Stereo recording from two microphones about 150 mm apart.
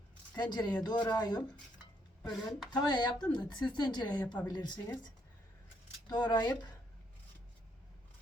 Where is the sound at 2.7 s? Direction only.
30° left (ahead or behind).